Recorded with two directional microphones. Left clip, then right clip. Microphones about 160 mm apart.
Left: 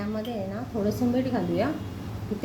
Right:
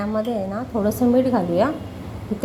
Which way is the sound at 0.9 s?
20° right (ahead or behind).